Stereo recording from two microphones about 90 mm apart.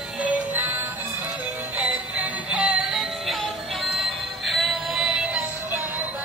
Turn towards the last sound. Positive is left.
turn(degrees=-10)  # may be behind; listen again after turning